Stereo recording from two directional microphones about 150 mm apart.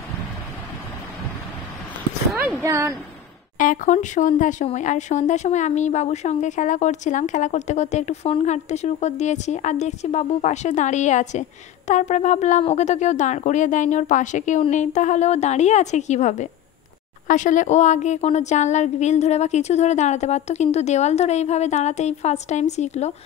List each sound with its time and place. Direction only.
2.3 s speech: 10° right (ahead or behind)
3.5 s speech: 60° left (ahead or behind)